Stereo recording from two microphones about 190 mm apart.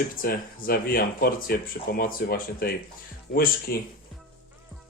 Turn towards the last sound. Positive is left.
turn(degrees=50)  # may be behind; listen again after turning